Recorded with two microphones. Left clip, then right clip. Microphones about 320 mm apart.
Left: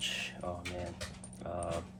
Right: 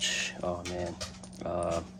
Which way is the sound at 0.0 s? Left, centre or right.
Right.